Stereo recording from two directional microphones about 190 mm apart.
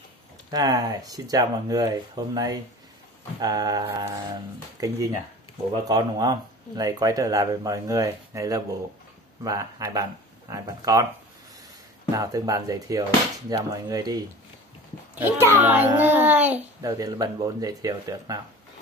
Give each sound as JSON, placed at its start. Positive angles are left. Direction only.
{"t": 0.5, "sound": "a child's voice", "side_deg": -20}
{"t": 12.2, "sound": "a child's voice", "side_deg": -20}